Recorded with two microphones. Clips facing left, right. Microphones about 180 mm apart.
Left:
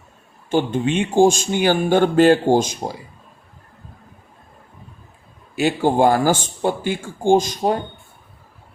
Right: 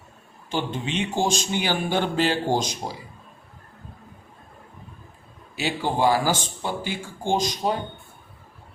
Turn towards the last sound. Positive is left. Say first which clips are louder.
# left 7 dB
turn(degrees=50)  # may be behind; listen again after turning